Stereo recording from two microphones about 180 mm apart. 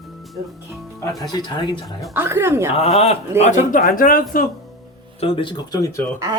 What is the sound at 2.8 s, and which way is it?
Speech, 35° left (ahead or behind).